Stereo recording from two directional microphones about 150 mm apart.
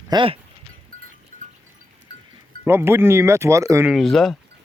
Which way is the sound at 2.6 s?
15° right (ahead or behind).